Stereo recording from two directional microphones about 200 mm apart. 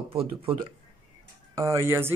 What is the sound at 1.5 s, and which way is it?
Speech, 15° right (ahead or behind).